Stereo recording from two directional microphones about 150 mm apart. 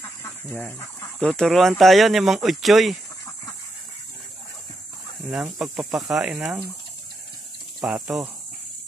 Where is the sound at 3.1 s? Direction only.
20° left (ahead or behind).